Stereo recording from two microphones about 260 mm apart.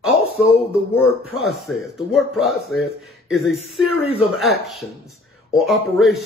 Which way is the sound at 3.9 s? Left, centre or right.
Left.